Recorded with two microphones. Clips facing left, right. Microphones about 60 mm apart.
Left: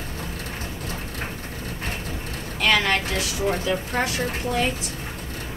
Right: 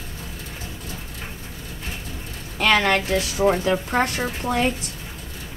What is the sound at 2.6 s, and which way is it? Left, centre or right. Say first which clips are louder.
A woman's voice: right 2 dB; right.